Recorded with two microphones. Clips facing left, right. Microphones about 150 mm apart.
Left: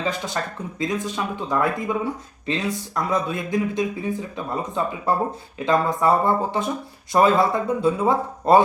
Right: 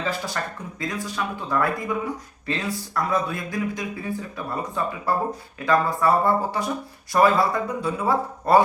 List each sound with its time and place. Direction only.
0.0 s speech: 20° left (ahead or behind)